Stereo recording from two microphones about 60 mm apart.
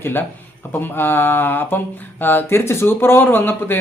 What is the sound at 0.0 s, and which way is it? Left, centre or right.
A man's voice, left.